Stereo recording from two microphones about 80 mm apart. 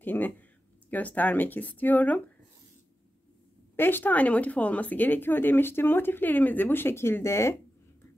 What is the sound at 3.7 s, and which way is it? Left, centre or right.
A woman's voice, left.